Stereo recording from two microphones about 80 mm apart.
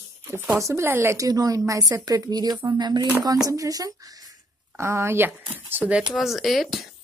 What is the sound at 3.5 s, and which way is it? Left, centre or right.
Speech, right.